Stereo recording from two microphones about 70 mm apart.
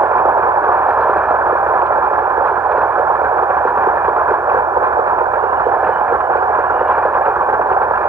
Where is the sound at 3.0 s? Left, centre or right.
Right.